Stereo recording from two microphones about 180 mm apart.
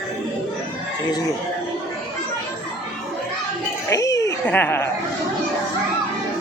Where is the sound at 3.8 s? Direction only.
20° left (ahead or behind).